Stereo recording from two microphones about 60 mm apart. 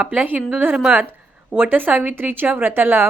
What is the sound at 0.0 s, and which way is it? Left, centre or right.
A woman's voice, right.